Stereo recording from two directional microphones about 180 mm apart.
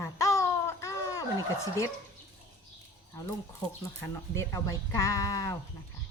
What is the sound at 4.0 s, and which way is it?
Speech, 15° left (ahead or behind).